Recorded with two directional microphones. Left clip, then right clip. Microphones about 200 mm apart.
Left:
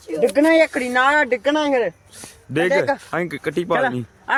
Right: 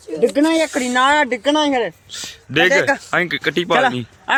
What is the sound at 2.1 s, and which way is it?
A man's voice, 5° left (ahead or behind).